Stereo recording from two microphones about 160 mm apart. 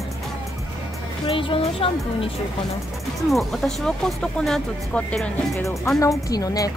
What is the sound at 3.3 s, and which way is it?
Speech, centre (ahead or behind).